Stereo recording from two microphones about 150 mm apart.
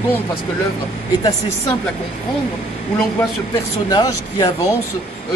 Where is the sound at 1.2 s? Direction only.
25° left (ahead or behind).